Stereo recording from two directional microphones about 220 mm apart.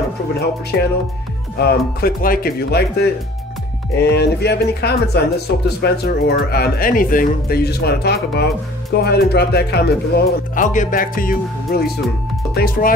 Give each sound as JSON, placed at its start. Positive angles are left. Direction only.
{"t": 0.3, "sound": "speech", "side_deg": 45}